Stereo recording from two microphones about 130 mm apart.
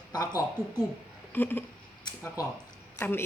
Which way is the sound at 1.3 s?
15° left (ahead or behind).